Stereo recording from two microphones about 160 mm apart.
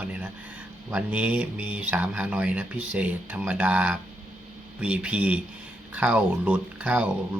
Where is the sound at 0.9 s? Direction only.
10° right (ahead or behind).